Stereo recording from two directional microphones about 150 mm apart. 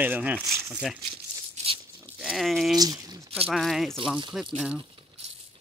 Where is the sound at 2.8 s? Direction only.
25° right (ahead or behind).